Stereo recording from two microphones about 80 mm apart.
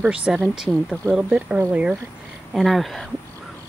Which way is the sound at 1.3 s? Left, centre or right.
Right.